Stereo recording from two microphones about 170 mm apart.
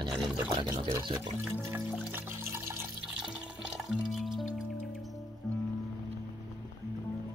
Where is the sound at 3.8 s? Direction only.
Centre (ahead or behind).